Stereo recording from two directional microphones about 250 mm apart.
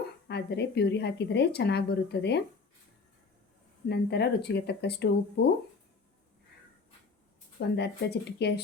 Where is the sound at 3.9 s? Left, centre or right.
Left.